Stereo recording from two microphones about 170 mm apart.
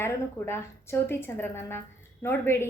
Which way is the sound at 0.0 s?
15° left (ahead or behind).